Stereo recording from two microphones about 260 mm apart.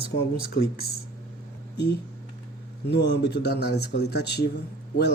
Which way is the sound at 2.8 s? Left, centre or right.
Left.